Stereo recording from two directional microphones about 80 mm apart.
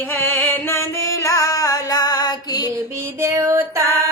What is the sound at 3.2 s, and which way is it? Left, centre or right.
Female singing, right.